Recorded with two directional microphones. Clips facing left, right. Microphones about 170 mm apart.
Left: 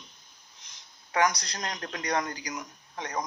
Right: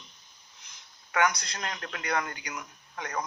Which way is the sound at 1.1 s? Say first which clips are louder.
Left 1 dB; 35° left (ahead or behind).